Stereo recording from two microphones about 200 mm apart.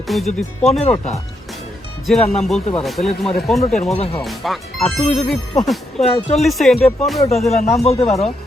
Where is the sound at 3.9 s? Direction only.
30° left (ahead or behind).